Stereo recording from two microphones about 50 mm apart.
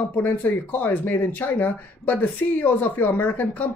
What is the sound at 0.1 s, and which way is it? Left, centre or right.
Speech, left.